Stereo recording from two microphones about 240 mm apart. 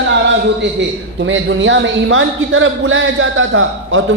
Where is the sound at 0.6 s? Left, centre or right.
Right.